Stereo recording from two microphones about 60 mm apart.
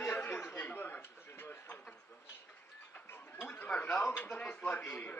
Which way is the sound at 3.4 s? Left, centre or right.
Left.